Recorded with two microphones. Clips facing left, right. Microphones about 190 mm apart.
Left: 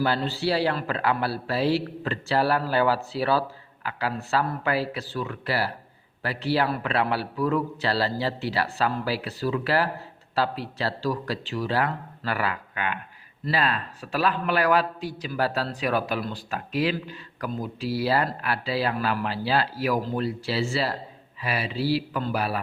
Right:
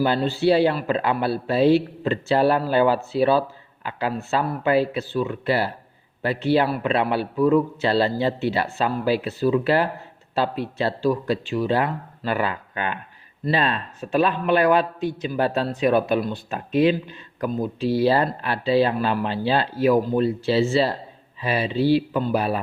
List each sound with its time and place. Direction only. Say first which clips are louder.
0.0 s a man's voice: right 5 dB; 20° right (ahead or behind)